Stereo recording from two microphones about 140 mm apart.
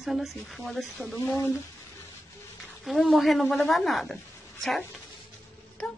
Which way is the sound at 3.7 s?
Centre (ahead or behind).